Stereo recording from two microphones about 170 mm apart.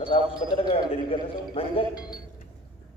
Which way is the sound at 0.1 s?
25° left (ahead or behind).